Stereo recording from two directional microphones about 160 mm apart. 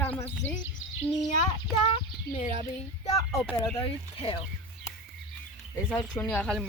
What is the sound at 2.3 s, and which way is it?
Speech, 45° left (ahead or behind).